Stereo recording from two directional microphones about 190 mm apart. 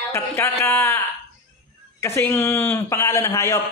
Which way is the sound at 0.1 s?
15° left (ahead or behind).